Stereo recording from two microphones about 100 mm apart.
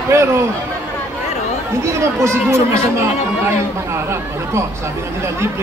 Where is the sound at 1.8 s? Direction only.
30° right (ahead or behind).